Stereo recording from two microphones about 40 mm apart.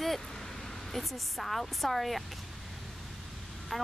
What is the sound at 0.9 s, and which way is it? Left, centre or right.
Speech, centre.